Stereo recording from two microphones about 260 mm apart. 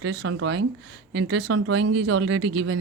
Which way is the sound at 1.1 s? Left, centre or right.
Right.